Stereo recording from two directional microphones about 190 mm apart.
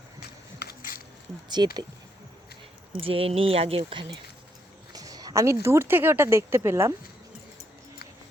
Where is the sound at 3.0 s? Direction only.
30° right (ahead or behind); by 6.9 s 15° right (ahead or behind).